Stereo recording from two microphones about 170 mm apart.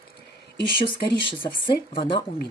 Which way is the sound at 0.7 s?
30° left (ahead or behind).